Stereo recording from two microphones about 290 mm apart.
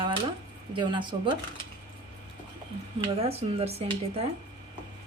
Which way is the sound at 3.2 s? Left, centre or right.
Right.